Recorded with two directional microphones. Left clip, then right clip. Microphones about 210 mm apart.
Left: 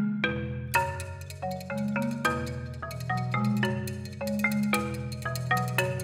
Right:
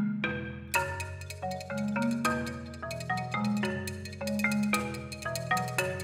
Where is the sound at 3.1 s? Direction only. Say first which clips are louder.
Left 1 dB; 25° left (ahead or behind).